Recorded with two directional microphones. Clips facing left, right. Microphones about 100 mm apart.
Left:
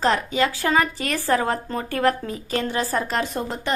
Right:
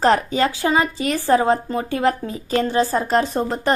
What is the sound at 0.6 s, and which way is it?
Speech, 20° right (ahead or behind).